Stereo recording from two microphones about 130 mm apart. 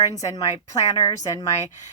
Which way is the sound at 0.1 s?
25° left (ahead or behind).